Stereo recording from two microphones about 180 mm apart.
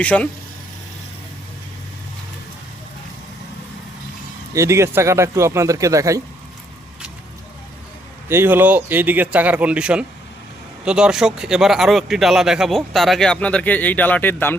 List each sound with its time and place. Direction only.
0.0 s speech: 5° left (ahead or behind)
4.5 s speech: 15° right (ahead or behind)
8.3 s speech: 10° right (ahead or behind); by 14.5 s 10° left (ahead or behind)